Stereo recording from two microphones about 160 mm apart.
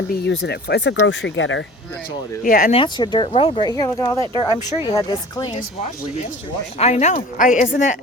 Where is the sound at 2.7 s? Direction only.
30° left (ahead or behind).